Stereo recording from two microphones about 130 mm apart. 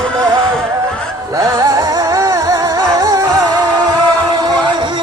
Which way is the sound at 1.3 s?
25° right (ahead or behind).